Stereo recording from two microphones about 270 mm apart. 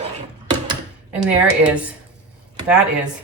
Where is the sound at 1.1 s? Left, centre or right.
Centre.